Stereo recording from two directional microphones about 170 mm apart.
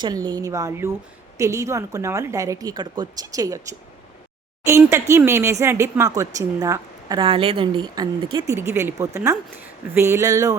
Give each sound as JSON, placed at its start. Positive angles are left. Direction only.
{"t": 0.0, "sound": "a woman's voice", "side_deg": -25}
{"t": 7.2, "sound": "a woman's voice", "side_deg": -30}
{"t": 8.5, "sound": "speech", "side_deg": -15}